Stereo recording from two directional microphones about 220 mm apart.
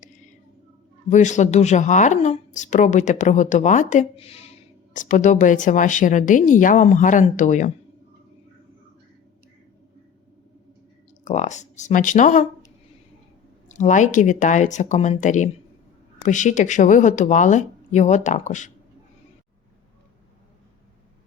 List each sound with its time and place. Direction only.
1.1 s speech: 35° left (ahead or behind)
11.3 s speech: 30° left (ahead or behind)